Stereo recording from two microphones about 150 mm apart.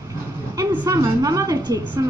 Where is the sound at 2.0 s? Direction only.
20° right (ahead or behind).